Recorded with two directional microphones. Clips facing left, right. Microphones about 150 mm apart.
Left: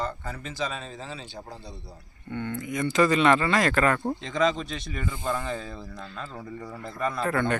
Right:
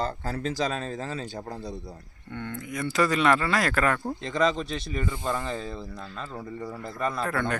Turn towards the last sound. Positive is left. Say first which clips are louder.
# left 2 dB
turn(degrees=0)  # may be behind; listen again after turning